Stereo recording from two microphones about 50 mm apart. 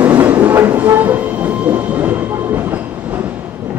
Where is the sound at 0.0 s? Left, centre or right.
Right.